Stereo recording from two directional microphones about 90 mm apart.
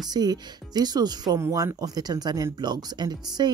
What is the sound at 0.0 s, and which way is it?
Speech, 50° right (ahead or behind).